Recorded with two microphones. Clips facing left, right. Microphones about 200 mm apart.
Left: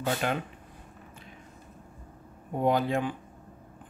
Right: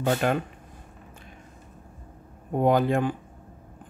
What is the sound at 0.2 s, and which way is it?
Speech, 45° right (ahead or behind).